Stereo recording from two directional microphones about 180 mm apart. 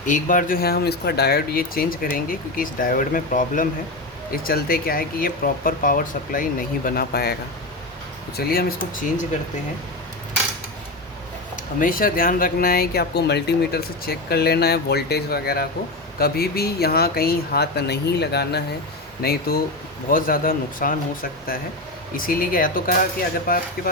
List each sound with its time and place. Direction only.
0.0 s speech: 45° left (ahead or behind)
8.4 s speech: 55° left (ahead or behind)
11.8 s speech: 50° left (ahead or behind)